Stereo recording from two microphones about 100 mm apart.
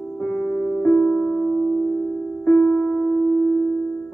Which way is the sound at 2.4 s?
15° left (ahead or behind).